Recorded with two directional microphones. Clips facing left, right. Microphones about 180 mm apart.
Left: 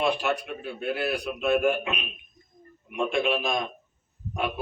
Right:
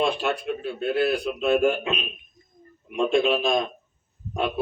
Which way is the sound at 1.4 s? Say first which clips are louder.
Right 1 dB; 25° right (ahead or behind).